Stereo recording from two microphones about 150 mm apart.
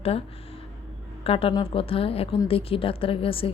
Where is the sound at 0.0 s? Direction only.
40° left (ahead or behind).